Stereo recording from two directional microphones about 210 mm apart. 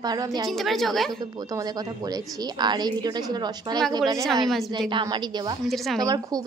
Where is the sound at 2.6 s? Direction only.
20° right (ahead or behind).